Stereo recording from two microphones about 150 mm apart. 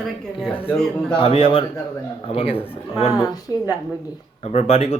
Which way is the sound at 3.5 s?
25° right (ahead or behind).